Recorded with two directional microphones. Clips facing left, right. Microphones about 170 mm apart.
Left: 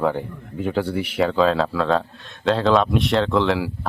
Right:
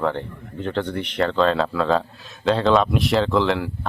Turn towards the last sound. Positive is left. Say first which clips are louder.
# left 1 dB
turn(degrees=5)  # may be behind; listen again after turning